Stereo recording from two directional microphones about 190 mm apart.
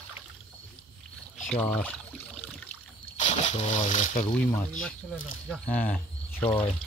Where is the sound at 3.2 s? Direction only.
35° left (ahead or behind).